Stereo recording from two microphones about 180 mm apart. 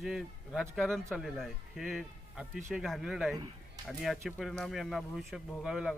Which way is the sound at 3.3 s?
20° right (ahead or behind).